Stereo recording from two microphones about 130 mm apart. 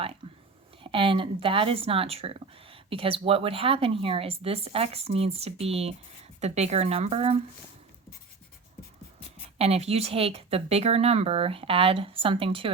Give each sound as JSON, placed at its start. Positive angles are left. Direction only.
{"t": 0.2, "sound": "a sound", "side_deg": -40}
{"t": 0.8, "sound": "speech", "side_deg": -40}
{"t": 9.6, "sound": "speech", "side_deg": -50}